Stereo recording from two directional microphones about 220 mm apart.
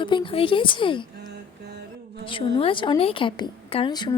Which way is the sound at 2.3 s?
25° left (ahead or behind).